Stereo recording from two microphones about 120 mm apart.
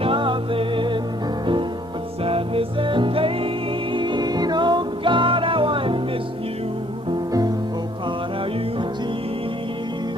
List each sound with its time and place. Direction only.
0.0 s music: 45° right (ahead or behind)
2.2 s music: 50° right (ahead or behind)